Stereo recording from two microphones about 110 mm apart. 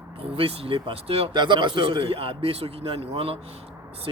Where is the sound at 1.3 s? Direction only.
45° right (ahead or behind); by 3.3 s 65° right (ahead or behind).